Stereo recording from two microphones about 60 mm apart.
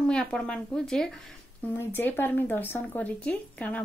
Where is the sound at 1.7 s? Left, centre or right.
Left.